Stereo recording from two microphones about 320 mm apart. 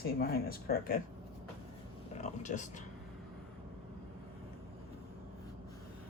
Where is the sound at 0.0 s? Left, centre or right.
Left.